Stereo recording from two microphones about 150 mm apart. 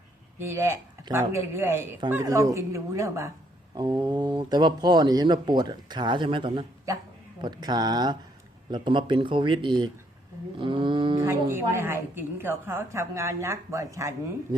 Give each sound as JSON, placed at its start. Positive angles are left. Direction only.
{"t": 0.3, "sound": "a woman's voice", "side_deg": -15}
{"t": 11.2, "sound": "a woman's voice", "side_deg": -15}